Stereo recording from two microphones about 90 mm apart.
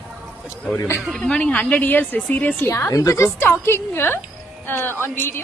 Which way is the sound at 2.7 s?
35° left (ahead or behind).